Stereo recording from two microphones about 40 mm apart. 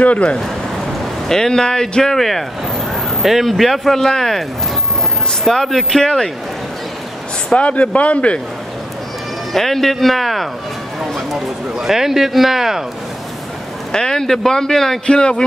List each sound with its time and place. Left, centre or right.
0.0 s speech: left
1.3 s speech: centre
3.2 s speech: centre
5.5 s speech: centre
7.5 s speech: left
9.5 s speech: centre
13.9 s speech: centre
15.0 s speech: left